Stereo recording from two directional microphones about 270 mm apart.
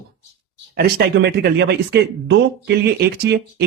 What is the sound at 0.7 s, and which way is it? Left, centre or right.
Speech, right.